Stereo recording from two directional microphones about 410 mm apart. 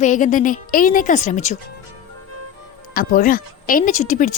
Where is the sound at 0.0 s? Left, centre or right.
Centre.